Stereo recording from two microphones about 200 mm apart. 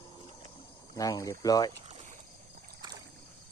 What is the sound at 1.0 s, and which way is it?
Speech, 15° left (ahead or behind).